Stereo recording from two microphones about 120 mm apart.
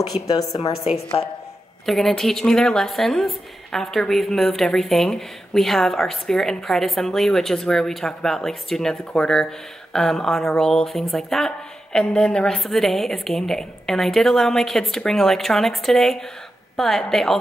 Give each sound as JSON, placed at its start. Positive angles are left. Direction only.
{"t": 0.3, "sound": "a woman's voice", "side_deg": 30}
{"t": 1.9, "sound": "speech", "side_deg": 0}